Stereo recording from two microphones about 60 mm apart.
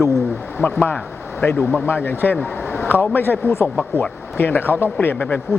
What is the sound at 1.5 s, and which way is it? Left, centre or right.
Speech, left.